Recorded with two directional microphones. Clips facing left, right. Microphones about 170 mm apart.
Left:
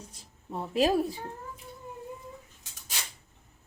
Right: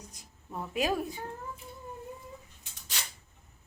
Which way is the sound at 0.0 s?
30° left (ahead or behind).